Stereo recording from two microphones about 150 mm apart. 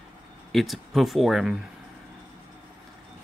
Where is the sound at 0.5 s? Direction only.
Centre (ahead or behind).